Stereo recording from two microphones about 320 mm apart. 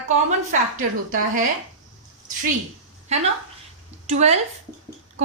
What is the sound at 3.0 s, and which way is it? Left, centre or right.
A woman's voice, centre.